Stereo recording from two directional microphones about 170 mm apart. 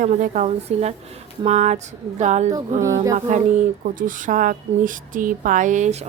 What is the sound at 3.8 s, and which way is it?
A woman's voice, 50° right (ahead or behind).